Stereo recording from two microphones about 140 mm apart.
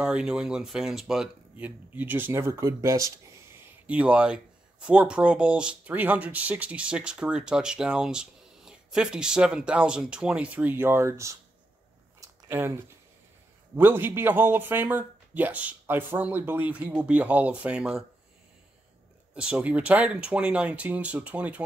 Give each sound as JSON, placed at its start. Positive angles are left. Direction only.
{"t": 0.0, "sound": "speech", "side_deg": -5}
{"t": 3.8, "sound": "speech", "side_deg": -10}
{"t": 12.2, "sound": "a sound", "side_deg": -20}
{"t": 13.7, "sound": "speech", "side_deg": -15}
{"t": 19.3, "sound": "speech", "side_deg": -10}